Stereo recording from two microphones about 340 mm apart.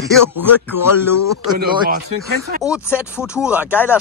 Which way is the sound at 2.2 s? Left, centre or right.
Right.